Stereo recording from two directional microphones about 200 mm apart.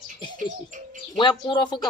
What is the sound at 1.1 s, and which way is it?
Speech, 25° left (ahead or behind).